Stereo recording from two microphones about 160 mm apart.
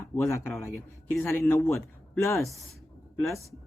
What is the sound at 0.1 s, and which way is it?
A man's voice, 15° left (ahead or behind).